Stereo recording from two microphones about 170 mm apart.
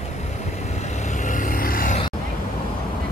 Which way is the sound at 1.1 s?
50° left (ahead or behind).